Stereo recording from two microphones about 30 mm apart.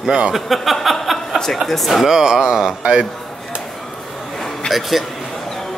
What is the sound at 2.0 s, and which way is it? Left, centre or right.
Speech, centre.